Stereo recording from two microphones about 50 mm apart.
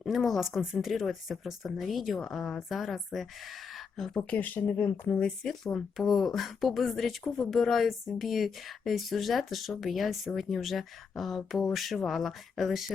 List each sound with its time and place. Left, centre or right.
0.0 s speech: centre
4.4 s speech: left
5.2 s speech: centre